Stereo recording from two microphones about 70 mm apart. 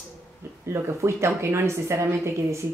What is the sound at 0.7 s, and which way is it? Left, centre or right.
A woman's voice, right.